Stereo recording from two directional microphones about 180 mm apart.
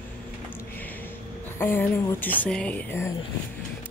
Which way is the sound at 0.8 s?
10° left (ahead or behind).